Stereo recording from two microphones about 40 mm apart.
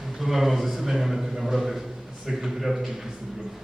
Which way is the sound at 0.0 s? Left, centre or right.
Centre.